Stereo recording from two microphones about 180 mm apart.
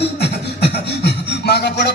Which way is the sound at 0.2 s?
65° left (ahead or behind).